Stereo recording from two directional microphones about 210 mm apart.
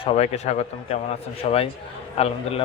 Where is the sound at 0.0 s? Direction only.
30° left (ahead or behind).